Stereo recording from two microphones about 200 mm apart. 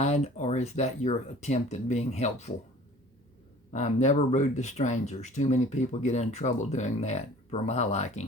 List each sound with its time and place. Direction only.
0.0 s speech: 35° left (ahead or behind)
3.7 s speech: 35° left (ahead or behind)